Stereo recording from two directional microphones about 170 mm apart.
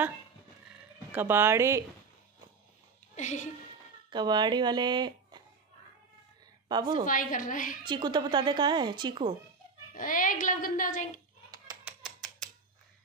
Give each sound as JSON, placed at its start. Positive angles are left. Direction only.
{"t": 1.1, "sound": "speech", "side_deg": -15}
{"t": 3.2, "sound": "a woman's voice", "side_deg": 45}
{"t": 4.1, "sound": "speech", "side_deg": -25}
{"t": 6.7, "sound": "speech", "side_deg": -25}
{"t": 7.1, "sound": "a woman's voice", "side_deg": 50}
{"t": 7.8, "sound": "speech", "side_deg": -25}
{"t": 9.9, "sound": "a woman's voice", "side_deg": 50}
{"t": 11.8, "sound": "a sound", "side_deg": 0}